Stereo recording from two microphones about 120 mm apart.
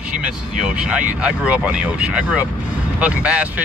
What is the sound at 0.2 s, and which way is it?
Speech, 5° right (ahead or behind).